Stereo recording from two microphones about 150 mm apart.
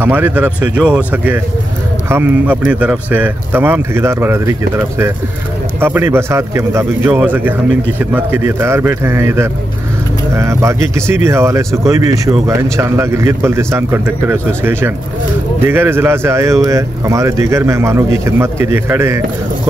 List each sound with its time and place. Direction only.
0.0 s a man's voice: 10° right (ahead or behind)